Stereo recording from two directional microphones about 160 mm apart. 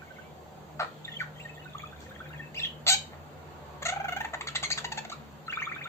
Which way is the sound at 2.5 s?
15° left (ahead or behind).